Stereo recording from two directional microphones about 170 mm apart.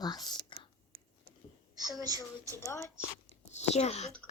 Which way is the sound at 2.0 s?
20° right (ahead or behind).